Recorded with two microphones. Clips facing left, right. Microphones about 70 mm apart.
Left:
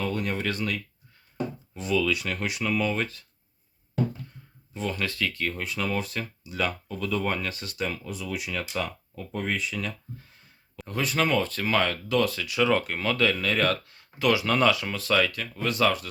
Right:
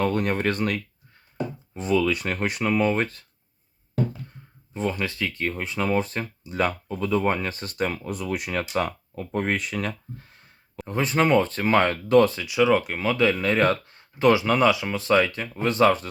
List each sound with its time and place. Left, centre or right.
0.0 s speech: right
1.7 s speech: right
4.7 s speech: right
6.8 s speech: right
10.8 s speech: right
12.3 s speech: centre
14.4 s speech: centre